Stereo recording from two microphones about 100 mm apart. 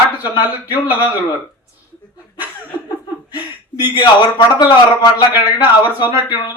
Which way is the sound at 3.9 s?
45° left (ahead or behind).